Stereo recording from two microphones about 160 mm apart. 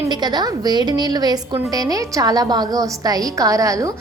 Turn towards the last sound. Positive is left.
turn(degrees=-20)  # may be behind; listen again after turning